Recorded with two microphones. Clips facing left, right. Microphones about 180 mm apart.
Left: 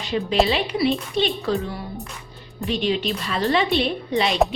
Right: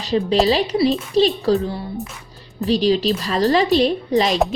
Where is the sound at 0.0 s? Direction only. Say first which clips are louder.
Right 3 dB; 35° right (ahead or behind).